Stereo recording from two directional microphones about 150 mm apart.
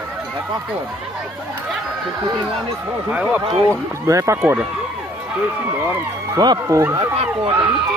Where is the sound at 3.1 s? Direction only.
10° right (ahead or behind).